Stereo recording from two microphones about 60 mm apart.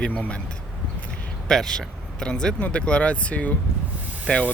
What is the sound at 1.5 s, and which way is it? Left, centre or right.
Speech, centre.